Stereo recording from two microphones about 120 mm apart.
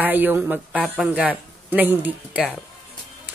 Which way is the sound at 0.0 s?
15° right (ahead or behind).